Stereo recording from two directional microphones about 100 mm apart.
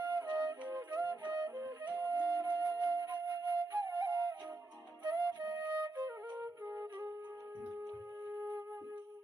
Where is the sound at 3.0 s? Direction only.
45° right (ahead or behind).